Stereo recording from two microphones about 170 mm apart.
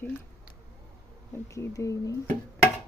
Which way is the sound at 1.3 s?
15° left (ahead or behind).